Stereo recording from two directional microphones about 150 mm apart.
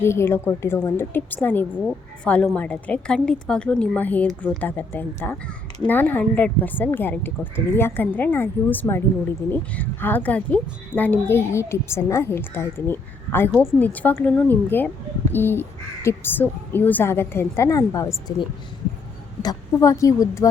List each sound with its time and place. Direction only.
0.0 s a woman's voice: 15° left (ahead or behind)